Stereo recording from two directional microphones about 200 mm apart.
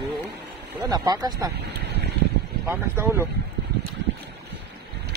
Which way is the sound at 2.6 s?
10° right (ahead or behind).